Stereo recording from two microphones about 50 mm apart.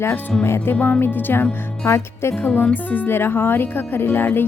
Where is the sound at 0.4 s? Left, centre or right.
Left.